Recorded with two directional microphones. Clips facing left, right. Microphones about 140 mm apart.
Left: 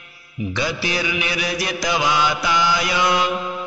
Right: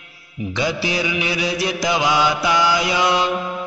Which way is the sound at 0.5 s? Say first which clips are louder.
Right 3 dB; 20° right (ahead or behind).